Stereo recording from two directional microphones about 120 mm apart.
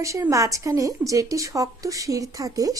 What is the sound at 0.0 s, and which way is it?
A woman's voice, 25° right (ahead or behind).